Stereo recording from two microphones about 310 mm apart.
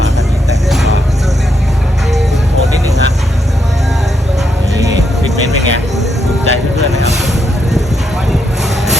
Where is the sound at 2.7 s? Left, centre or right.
Centre.